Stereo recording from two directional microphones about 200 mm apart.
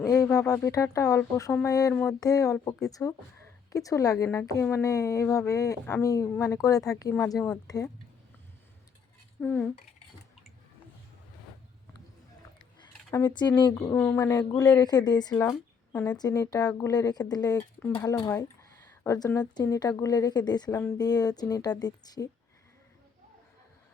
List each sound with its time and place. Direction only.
0.1 s speech: 15° left (ahead or behind)
9.4 s speech: 5° left (ahead or behind)
13.1 s a woman's voice: 15° left (ahead or behind)